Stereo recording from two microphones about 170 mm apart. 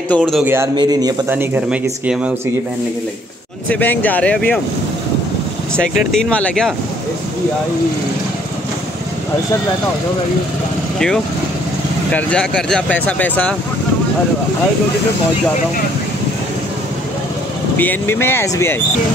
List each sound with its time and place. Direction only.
0.2 s speech: 5° right (ahead or behind)
0.6 s a man's voice: 25° right (ahead or behind)
1.3 s speech: 10° right (ahead or behind)
3.6 s speech: 10° left (ahead or behind)
5.8 s speech: 5° left (ahead or behind)
12.1 s speech: 10° left (ahead or behind)
17.7 s speech: 10° left (ahead or behind)